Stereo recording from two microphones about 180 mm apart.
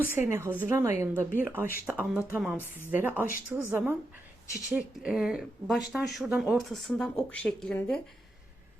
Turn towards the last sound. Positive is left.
turn(degrees=5)  # may be behind; listen again after turning